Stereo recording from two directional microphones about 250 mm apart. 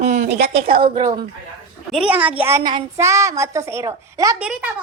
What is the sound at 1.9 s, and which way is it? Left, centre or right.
A child's voice, centre.